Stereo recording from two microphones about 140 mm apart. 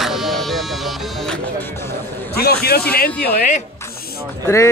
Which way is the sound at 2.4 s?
90° left.